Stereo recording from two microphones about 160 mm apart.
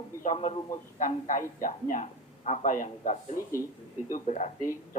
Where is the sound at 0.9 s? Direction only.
55° left (ahead or behind).